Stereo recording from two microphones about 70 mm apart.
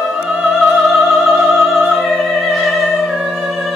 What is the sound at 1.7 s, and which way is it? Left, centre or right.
Opera, centre.